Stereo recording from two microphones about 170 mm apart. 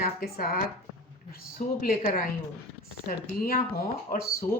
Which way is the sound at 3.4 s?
60° left (ahead or behind).